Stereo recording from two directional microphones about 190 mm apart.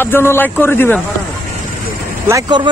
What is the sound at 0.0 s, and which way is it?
Speech, 10° left (ahead or behind).